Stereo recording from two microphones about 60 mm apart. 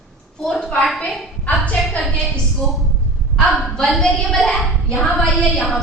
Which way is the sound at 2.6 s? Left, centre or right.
Centre.